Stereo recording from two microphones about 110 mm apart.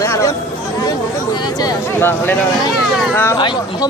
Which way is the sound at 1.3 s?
35° left (ahead or behind).